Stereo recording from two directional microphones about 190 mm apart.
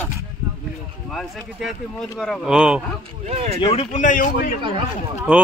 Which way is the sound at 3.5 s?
25° left (ahead or behind).